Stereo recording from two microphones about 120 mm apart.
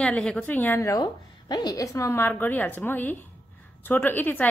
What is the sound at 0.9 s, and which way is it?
A woman's voice, 35° left (ahead or behind).